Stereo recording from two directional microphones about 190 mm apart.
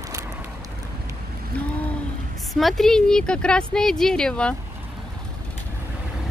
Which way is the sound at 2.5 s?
Centre (ahead or behind).